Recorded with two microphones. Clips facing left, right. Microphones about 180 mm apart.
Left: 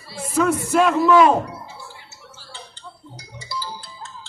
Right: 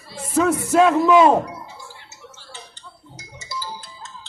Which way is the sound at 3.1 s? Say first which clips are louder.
Left 1 dB; 20° right (ahead or behind).